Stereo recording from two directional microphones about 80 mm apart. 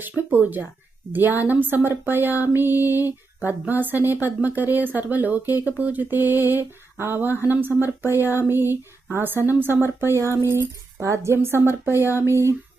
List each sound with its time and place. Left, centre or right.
0.3 s speech: right